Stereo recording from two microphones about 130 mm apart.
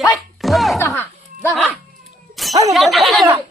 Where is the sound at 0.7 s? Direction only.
20° left (ahead or behind).